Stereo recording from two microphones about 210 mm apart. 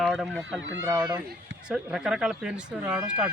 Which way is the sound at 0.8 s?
10° right (ahead or behind).